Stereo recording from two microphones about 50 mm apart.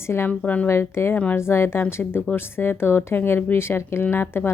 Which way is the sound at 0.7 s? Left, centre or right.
Left.